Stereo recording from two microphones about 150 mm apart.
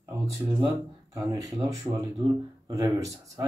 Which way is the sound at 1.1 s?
25° right (ahead or behind).